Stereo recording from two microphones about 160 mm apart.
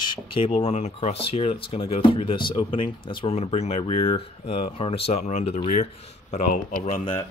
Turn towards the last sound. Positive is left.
turn(degrees=30)  # may be behind; listen again after turning